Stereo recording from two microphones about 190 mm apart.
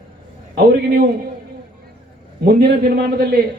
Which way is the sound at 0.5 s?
55° right (ahead or behind).